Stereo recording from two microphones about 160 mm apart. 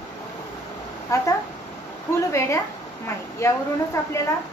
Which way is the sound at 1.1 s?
20° left (ahead or behind).